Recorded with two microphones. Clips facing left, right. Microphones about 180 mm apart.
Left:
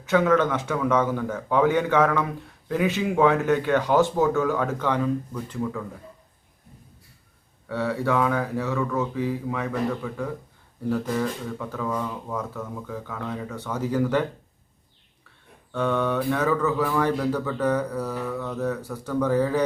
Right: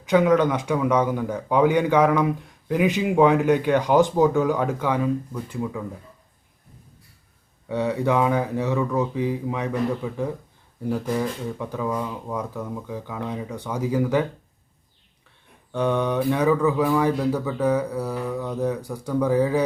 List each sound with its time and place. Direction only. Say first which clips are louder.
0.0 s speech: right 2 dB; 15° right (ahead or behind)
7.7 s speech: right 2 dB; 20° right (ahead or behind)
15.7 s speech: right 2 dB; 15° right (ahead or behind)